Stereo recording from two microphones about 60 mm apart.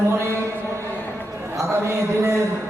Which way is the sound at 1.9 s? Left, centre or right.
Right.